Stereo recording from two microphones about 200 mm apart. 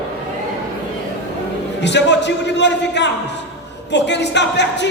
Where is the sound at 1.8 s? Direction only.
60° left (ahead or behind).